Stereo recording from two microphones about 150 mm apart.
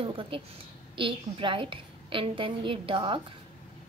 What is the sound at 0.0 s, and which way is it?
A woman's voice, 35° right (ahead or behind).